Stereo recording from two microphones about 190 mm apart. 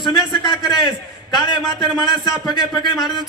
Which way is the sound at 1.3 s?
25° left (ahead or behind).